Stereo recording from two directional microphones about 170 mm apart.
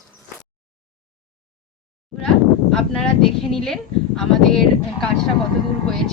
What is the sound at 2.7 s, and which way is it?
Speech, centre (ahead or behind).